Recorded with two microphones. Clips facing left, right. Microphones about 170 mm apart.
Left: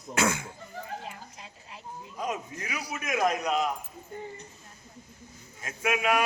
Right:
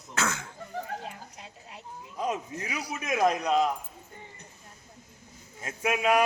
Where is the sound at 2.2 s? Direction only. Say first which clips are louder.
Right 2 dB; 30° right (ahead or behind).